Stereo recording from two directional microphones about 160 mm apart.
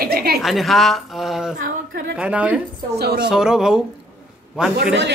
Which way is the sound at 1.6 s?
90° right.